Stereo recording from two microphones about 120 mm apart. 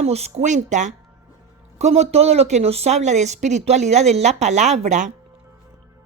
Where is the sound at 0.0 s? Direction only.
65° right (ahead or behind); by 0.9 s 80° right.